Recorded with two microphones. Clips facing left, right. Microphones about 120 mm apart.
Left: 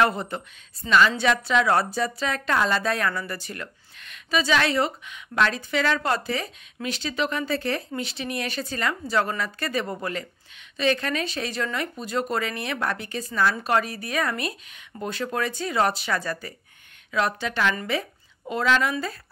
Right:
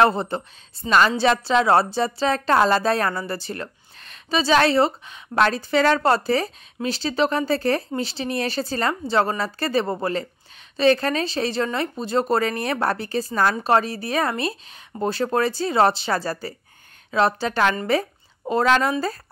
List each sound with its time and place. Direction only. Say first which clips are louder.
0.0 s a woman's voice: right 4 dB; 30° right (ahead or behind)
13.7 s a woman's voice: right 4 dB; 30° right (ahead or behind)